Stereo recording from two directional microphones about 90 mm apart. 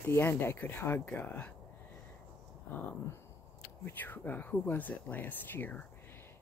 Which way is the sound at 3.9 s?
20° left (ahead or behind).